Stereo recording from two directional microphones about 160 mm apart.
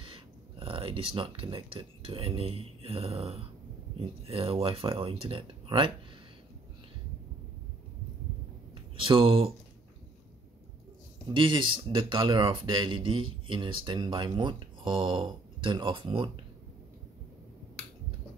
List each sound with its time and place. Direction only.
0.0 s speech: 35° right (ahead or behind)
8.9 s speech: 35° right (ahead or behind)
11.3 s speech: 30° right (ahead or behind)